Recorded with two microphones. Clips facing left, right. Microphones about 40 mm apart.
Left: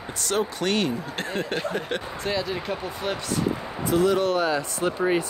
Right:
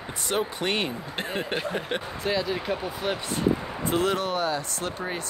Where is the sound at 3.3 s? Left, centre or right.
Right.